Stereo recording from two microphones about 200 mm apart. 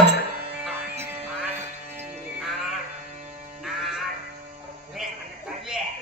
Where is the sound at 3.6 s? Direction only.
Centre (ahead or behind).